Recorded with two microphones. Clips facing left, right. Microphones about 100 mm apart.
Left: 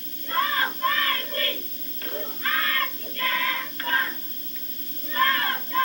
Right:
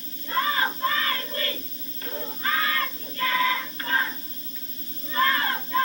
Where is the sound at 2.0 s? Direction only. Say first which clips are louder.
Right 1 dB; 20° right (ahead or behind).